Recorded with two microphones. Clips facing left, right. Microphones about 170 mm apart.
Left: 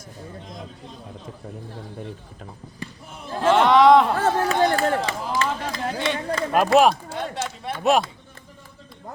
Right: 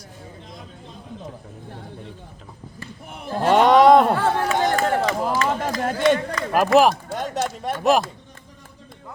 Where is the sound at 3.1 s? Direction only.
55° right (ahead or behind).